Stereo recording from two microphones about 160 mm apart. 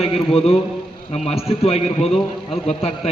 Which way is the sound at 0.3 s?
35° left (ahead or behind).